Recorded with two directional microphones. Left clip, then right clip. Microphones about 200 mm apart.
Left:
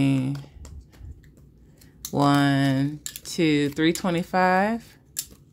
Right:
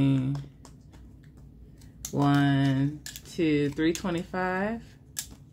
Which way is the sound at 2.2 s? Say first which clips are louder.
Left 5 dB; 35° left (ahead or behind).